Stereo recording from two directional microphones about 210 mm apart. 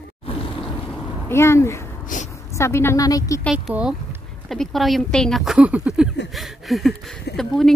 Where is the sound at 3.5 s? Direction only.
5° right (ahead or behind).